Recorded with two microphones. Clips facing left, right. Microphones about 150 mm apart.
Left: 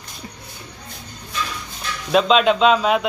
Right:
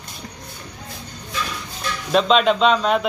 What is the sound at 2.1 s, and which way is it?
Speech, centre (ahead or behind).